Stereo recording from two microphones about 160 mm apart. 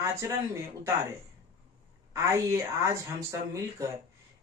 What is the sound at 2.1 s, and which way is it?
Speech, 15° right (ahead or behind).